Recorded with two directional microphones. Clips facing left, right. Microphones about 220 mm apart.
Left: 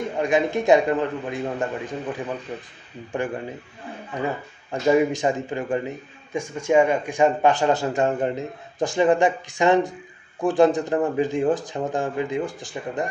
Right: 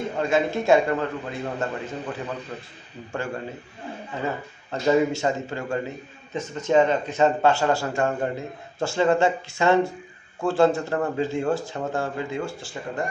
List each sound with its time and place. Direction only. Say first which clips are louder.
0.2 s a man's voice: left 2 dB; 15° left (ahead or behind)